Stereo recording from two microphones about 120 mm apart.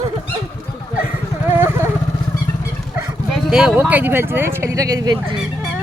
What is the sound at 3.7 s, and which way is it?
Speech, 15° right (ahead or behind).